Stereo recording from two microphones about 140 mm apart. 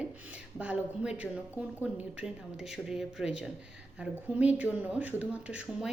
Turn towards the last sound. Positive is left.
turn(degrees=-10)  # may be behind; listen again after turning